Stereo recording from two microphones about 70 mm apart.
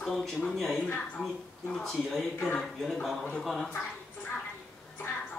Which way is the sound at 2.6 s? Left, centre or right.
Centre.